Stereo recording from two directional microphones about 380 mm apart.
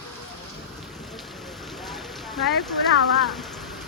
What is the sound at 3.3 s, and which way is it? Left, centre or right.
Rain on surface, centre.